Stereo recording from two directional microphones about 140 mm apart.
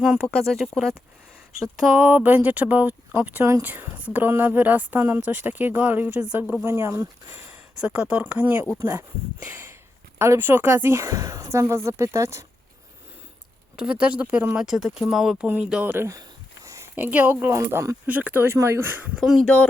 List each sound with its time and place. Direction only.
0.0 s speech: centre (ahead or behind)
1.9 s speech: 15° right (ahead or behind)
7.8 s speech: 10° right (ahead or behind)
13.7 s speech: 5° right (ahead or behind)
19.1 s speech: 5° right (ahead or behind)